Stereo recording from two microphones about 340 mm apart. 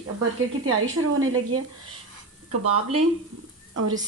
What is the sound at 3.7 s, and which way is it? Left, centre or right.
Speech, right.